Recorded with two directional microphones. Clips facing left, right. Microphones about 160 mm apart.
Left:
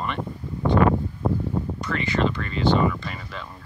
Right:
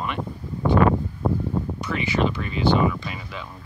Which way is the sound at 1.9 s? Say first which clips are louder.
Even; 10° right (ahead or behind).